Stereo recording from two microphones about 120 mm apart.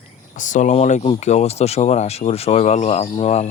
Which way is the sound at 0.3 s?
90° left.